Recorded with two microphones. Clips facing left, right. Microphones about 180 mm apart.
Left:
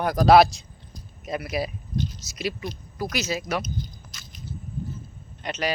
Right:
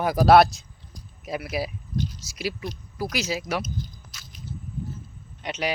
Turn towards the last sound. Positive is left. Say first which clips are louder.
# left 1 dB
turn(degrees=-10)  # may be behind; listen again after turning